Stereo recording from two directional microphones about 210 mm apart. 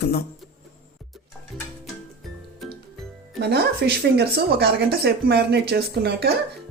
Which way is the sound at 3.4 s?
50° right (ahead or behind).